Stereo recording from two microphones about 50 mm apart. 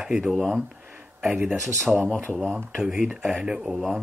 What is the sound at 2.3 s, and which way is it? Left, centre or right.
Speech, centre.